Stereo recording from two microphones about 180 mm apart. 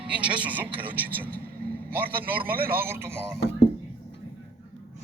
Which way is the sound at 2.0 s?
55° right (ahead or behind).